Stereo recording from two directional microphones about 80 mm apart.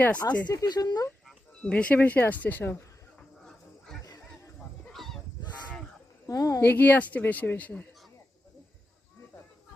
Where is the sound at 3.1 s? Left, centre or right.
Centre.